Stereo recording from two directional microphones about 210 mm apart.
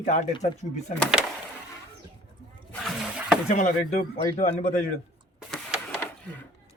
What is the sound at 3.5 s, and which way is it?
Speech, 35° left (ahead or behind).